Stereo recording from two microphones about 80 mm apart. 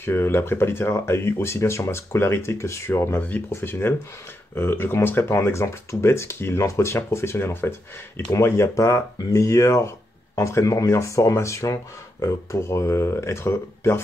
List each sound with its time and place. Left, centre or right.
0.0 s speech: left
3.2 s speech: left